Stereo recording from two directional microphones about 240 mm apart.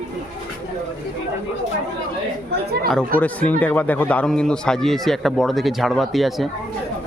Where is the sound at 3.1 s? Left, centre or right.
Centre.